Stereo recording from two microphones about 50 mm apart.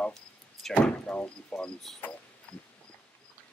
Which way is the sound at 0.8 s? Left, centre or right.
Left.